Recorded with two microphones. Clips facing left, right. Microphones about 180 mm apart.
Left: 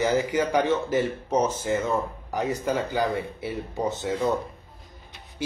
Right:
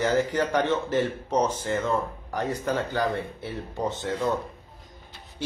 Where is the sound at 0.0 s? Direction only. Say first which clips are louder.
Left 1 dB; 10° left (ahead or behind).